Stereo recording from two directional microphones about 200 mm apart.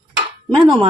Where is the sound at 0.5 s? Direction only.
25° right (ahead or behind).